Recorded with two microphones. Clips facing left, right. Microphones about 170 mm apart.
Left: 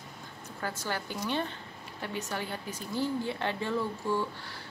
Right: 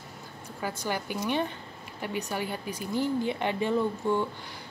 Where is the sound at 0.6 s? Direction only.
15° right (ahead or behind).